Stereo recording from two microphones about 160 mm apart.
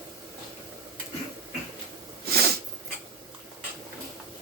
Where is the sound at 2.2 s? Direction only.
80° right.